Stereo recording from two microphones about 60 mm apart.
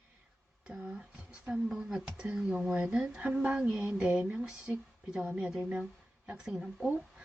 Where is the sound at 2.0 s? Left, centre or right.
Right.